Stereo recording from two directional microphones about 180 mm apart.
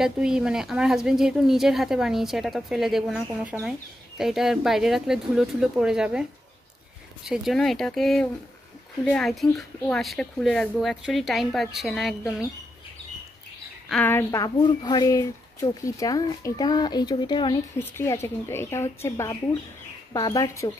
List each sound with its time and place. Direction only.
0.0 s a woman's voice: 5° right (ahead or behind)
7.2 s a woman's voice: centre (ahead or behind)
13.8 s a woman's voice: 5° left (ahead or behind); by 17.6 s 25° left (ahead or behind)
17.7 s a woman's voice: 15° left (ahead or behind)